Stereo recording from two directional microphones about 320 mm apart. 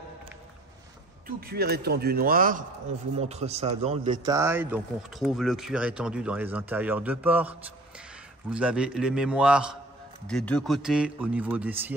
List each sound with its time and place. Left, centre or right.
1.2 s a man's voice: right; by 11.9 s centre